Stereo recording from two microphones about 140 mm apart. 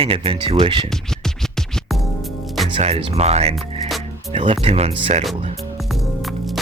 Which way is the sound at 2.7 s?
50° right (ahead or behind).